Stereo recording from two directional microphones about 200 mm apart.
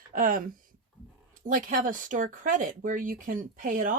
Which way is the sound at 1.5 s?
40° right (ahead or behind).